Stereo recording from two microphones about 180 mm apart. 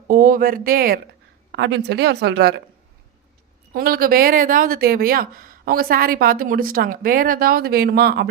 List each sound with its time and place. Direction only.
0.1 s speech: 50° right (ahead or behind)
1.5 s a woman's voice: 80° right
3.7 s speech: 55° right (ahead or behind)